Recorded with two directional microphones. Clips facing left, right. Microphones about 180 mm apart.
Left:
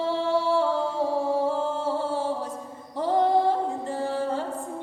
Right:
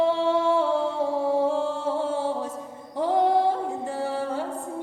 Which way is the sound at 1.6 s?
20° right (ahead or behind).